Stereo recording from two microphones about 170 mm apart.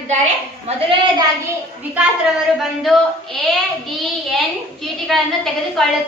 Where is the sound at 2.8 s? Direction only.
Centre (ahead or behind).